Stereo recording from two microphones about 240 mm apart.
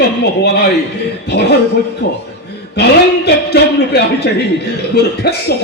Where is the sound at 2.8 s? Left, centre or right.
Left.